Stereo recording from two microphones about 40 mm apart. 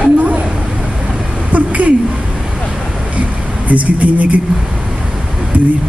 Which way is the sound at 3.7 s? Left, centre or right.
Right.